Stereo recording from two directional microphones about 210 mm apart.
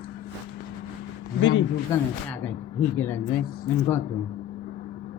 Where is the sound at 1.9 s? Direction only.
15° left (ahead or behind).